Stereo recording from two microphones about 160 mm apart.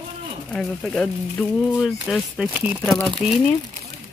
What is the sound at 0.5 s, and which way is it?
Speech, 5° left (ahead or behind).